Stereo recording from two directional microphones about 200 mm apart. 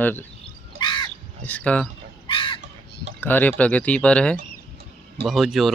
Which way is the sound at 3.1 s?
10° left (ahead or behind).